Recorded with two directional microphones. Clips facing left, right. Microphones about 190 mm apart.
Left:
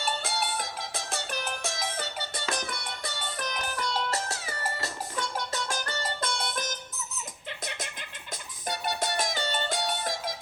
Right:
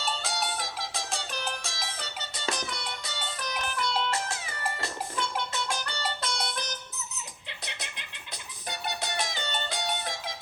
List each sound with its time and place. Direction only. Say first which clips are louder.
0.0 s music: left 1 dB; 55° left (ahead or behind)
3.8 s music: right 1 dB; 40° left (ahead or behind)
7.6 s a sound: left 4 dB; 45° left (ahead or behind)
8.6 s music: left 4 dB; 45° left (ahead or behind)